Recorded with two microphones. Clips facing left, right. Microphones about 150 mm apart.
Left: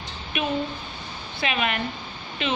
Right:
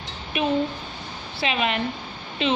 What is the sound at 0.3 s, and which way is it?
A woman's voice, 30° right (ahead or behind).